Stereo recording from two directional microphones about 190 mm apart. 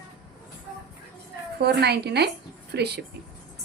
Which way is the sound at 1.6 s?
60° right (ahead or behind).